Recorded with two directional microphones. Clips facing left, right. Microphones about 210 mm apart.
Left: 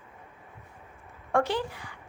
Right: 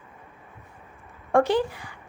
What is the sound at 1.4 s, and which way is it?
Speech, 15° right (ahead or behind).